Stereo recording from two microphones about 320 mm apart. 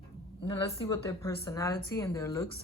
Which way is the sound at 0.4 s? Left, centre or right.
Centre.